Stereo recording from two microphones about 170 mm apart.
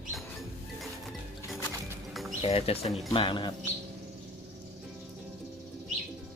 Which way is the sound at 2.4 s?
35° left (ahead or behind).